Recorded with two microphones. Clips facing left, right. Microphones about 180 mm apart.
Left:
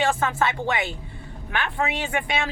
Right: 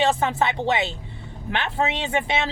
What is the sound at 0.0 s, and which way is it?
A woman's voice, 20° right (ahead or behind).